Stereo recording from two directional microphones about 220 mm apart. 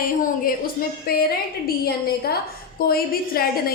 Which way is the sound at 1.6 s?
45° left (ahead or behind).